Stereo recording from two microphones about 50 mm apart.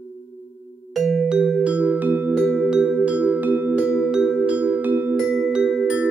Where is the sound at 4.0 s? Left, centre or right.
Centre; by 5.1 s right.